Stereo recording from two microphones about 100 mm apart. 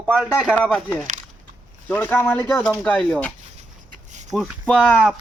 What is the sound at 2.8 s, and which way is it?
Speech, 10° left (ahead or behind).